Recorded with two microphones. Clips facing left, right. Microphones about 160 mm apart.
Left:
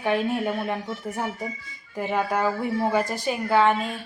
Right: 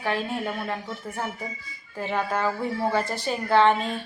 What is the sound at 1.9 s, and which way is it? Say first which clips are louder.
A woman's voice: left 2 dB; 15° left (ahead or behind).